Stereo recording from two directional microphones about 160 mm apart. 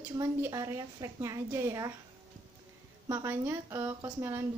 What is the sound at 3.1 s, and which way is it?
Speech, 15° right (ahead or behind).